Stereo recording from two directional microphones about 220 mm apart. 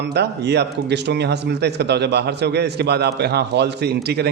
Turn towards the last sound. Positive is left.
turn(degrees=-50)  # may be behind; listen again after turning